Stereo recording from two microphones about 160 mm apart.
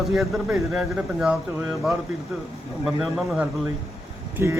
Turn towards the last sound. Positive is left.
turn(degrees=-15)  # may be behind; listen again after turning